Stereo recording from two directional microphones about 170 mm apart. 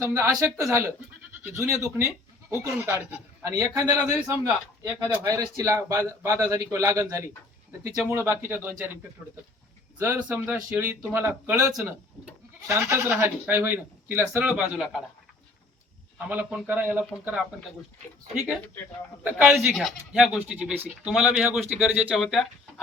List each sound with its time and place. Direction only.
0.0 s a man's voice: 15° right (ahead or behind)
10.0 s a man's voice: 10° right (ahead or behind)
11.7 s speech: centre (ahead or behind)
12.6 s a man's voice: 15° right (ahead or behind)
16.1 s a man's voice: 10° right (ahead or behind)
19.2 s speech: 10° right (ahead or behind)